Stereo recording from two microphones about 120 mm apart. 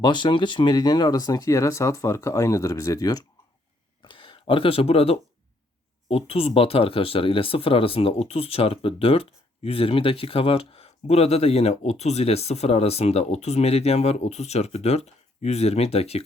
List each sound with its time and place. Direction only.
0.0 s speech: 40° left (ahead or behind)
4.0 s speech: 45° left (ahead or behind); by 16.2 s 60° left (ahead or behind)